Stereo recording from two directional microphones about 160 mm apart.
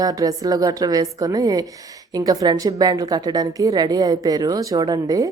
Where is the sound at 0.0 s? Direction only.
25° right (ahead or behind).